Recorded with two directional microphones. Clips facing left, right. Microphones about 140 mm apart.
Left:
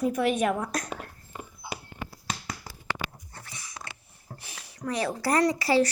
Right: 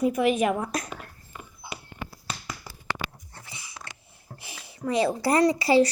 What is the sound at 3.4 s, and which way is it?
Dog, 15° right (ahead or behind).